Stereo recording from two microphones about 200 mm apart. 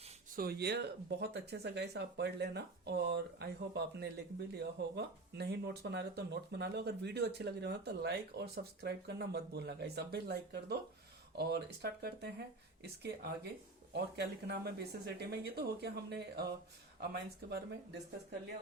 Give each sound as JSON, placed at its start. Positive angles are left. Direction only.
{"t": 0.3, "sound": "speech", "side_deg": -50}